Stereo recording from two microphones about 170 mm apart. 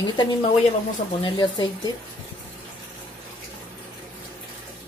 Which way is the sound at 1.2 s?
25° left (ahead or behind).